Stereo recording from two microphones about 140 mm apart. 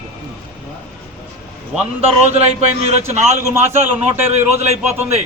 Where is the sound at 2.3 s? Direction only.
50° right (ahead or behind).